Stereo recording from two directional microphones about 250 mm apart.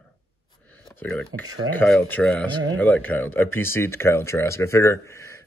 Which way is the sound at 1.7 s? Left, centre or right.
Centre.